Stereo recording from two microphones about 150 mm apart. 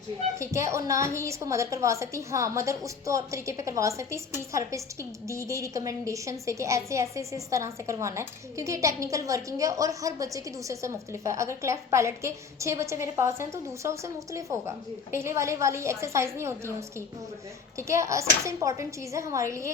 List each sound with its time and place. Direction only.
0.3 s a woman's voice: 20° right (ahead or behind)
17.7 s a woman's voice: 20° right (ahead or behind)